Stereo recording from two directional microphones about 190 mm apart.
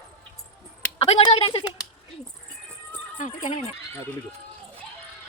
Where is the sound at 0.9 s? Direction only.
30° left (ahead or behind).